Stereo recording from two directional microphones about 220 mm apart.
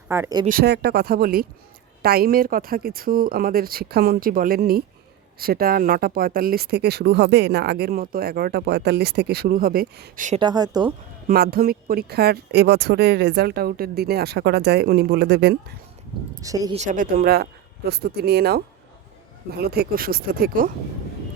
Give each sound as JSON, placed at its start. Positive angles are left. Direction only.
{"t": 0.1, "sound": "speech", "side_deg": -15}
{"t": 0.4, "sound": "speech", "side_deg": -45}
{"t": 10.4, "sound": "a woman's voice", "side_deg": -20}
{"t": 11.3, "sound": "speech", "side_deg": -40}
{"t": 16.4, "sound": "speech", "side_deg": -15}
{"t": 16.7, "sound": "speech", "side_deg": -35}